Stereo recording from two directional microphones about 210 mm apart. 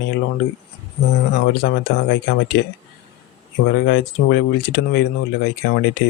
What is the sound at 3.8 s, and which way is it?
Speech, 55° left (ahead or behind).